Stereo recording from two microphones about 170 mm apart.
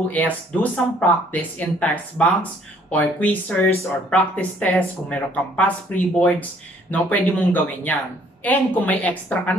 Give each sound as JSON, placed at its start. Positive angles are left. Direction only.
{"t": 0.1, "sound": "speech", "side_deg": 10}